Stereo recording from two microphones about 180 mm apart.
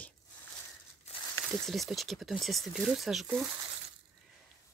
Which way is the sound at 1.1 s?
35° left (ahead or behind).